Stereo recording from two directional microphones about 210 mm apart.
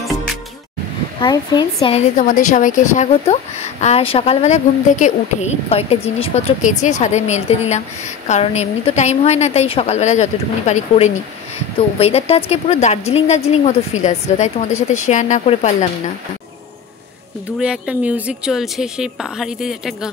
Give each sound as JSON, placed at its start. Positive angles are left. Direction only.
{"t": 1.2, "sound": "a woman's voice", "side_deg": 20}
{"t": 17.6, "sound": "a woman's voice", "side_deg": -5}